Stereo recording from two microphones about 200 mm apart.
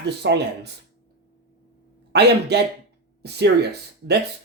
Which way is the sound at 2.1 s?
55° right (ahead or behind).